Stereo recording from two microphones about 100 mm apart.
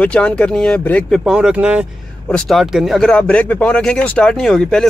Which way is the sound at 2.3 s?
5° left (ahead or behind).